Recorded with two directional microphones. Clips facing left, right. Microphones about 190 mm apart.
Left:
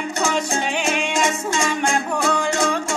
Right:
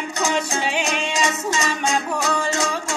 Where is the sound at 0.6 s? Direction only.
50° left (ahead or behind).